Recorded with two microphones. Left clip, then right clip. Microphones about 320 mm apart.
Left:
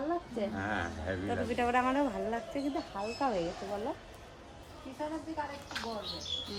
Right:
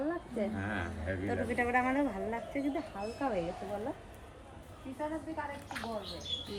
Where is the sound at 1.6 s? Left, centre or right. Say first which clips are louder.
Left 1 dB; centre.